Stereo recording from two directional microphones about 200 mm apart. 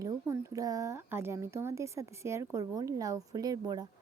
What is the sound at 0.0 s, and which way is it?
A woman's voice, 15° right (ahead or behind).